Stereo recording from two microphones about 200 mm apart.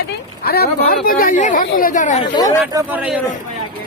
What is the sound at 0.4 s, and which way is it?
Speech, 50° left (ahead or behind).